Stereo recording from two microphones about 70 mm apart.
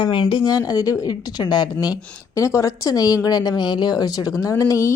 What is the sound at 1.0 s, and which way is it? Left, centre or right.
A woman's voice, left.